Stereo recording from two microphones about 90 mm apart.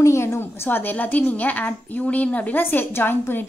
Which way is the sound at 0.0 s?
30° left (ahead or behind).